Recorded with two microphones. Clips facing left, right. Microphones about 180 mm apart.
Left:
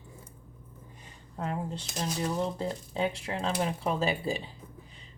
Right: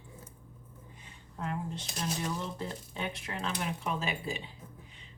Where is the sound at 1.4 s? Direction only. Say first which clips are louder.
Left 3 dB; 35° left (ahead or behind).